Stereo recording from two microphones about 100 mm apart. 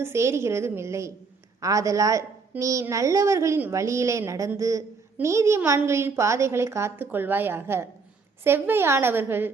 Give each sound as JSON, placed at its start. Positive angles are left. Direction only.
{"t": 0.0, "sound": "a woman's voice", "side_deg": -25}